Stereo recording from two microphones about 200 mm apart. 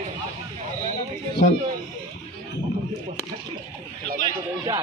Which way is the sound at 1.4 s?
40° left (ahead or behind).